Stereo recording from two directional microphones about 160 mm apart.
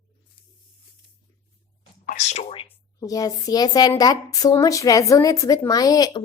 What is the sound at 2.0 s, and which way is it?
Speech, 50° left (ahead or behind).